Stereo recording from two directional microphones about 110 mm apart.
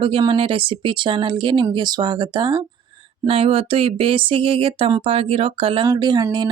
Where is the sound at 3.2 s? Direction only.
60° right (ahead or behind).